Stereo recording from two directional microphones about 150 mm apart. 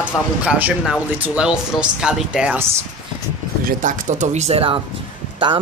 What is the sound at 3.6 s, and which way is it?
Speech, 60° right (ahead or behind).